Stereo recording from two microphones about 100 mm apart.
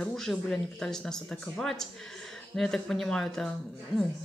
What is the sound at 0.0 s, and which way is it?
Speech, 5° left (ahead or behind).